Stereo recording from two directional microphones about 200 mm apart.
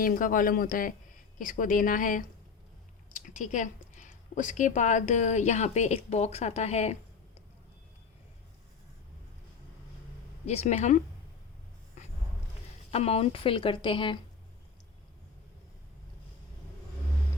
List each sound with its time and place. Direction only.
0.0 s a woman's voice: 45° left (ahead or behind)
10.4 s a woman's voice: 35° left (ahead or behind)
12.9 s a woman's voice: 30° left (ahead or behind)